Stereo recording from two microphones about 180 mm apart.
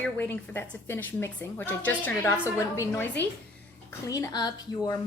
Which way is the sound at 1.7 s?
10° left (ahead or behind).